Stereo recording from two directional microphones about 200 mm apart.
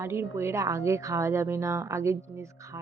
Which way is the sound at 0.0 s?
15° right (ahead or behind).